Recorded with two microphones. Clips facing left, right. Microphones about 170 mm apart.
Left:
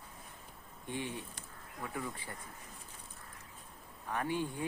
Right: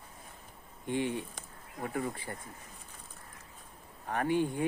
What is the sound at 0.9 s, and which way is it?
Speech, 60° right (ahead or behind).